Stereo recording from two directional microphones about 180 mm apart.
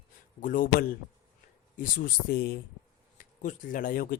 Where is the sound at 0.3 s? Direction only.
50° left (ahead or behind).